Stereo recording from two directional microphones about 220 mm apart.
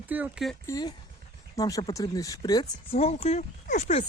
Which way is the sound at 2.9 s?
30° left (ahead or behind).